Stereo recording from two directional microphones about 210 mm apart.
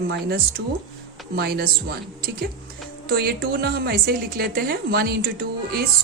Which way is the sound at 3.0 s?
45° right (ahead or behind).